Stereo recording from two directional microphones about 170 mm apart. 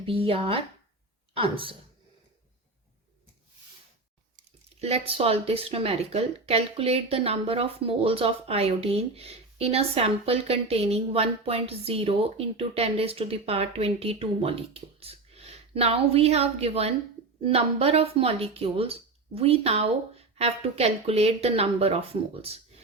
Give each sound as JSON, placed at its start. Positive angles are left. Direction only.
{"t": 0.0, "sound": "speech", "side_deg": -35}
{"t": 4.8, "sound": "speech", "side_deg": -35}